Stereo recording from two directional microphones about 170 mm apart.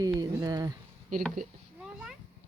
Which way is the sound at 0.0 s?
20° right (ahead or behind).